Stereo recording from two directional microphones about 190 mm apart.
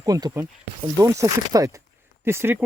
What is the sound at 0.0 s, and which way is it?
Speech, 20° right (ahead or behind).